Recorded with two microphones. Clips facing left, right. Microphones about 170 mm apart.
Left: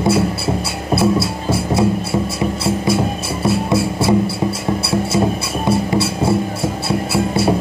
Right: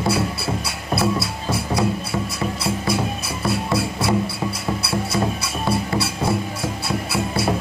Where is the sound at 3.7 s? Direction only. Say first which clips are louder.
Left 5 dB; 25° left (ahead or behind).